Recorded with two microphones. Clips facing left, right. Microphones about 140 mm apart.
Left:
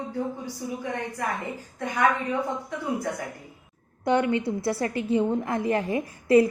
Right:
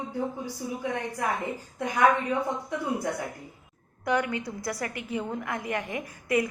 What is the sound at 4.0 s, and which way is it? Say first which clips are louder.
A woman's voice: left 5 dB; 25° left (ahead or behind).